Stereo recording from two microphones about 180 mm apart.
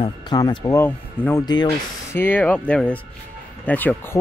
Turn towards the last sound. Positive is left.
turn(degrees=10)  # may be behind; listen again after turning